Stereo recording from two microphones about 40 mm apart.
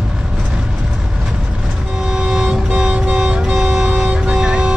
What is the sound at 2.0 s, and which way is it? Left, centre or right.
Vehicle, centre.